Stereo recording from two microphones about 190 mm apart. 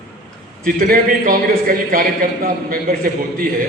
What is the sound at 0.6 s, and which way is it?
A man's voice, 45° right (ahead or behind).